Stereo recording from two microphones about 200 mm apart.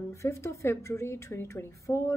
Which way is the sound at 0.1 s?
15° left (ahead or behind).